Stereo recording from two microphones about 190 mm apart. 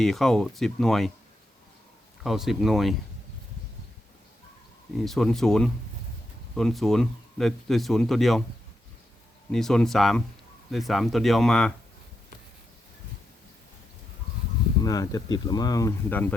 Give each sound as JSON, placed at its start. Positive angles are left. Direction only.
{"t": 0.0, "sound": "speech", "side_deg": 0}
{"t": 2.2, "sound": "speech", "side_deg": 0}
{"t": 4.9, "sound": "speech", "side_deg": 0}
{"t": 9.5, "sound": "speech", "side_deg": 0}
{"t": 14.8, "sound": "speech", "side_deg": 20}